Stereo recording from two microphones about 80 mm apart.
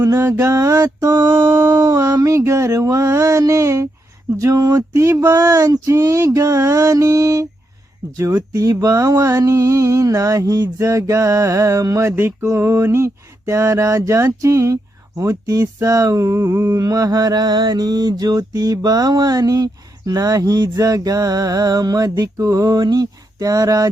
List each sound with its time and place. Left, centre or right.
0.2 s mantra: right
0.4 s mantra: right
1.5 s mantra: right
1.7 s mantra: right
5.2 s mantra: right
12.1 s mantra: right
16.7 s mantra: right